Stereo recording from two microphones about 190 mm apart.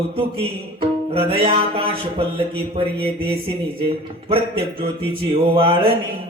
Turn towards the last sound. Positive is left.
turn(degrees=-30)  # may be behind; listen again after turning